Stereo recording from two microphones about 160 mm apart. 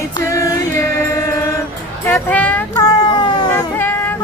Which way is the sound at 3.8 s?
10° left (ahead or behind).